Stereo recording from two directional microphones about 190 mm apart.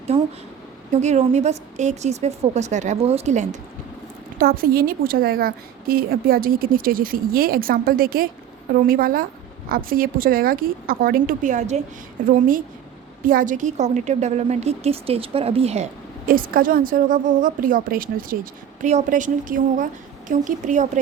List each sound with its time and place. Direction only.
1.0 s a woman's voice: 35° right (ahead or behind)
4.4 s a woman's voice: 50° right (ahead or behind)
13.2 s a woman's voice: 45° right (ahead or behind)